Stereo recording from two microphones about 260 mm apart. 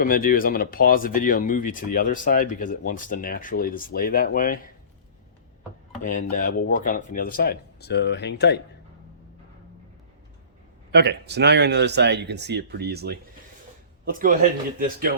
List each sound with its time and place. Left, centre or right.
0.0 s speech: left
6.0 s speech: left
10.9 s speech: right